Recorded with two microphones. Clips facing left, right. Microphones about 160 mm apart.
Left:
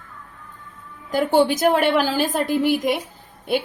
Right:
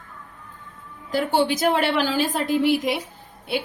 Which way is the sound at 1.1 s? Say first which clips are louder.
Left 4 dB; 50° left (ahead or behind).